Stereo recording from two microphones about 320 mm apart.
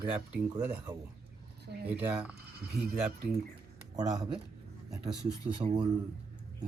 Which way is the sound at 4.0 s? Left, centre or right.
Centre.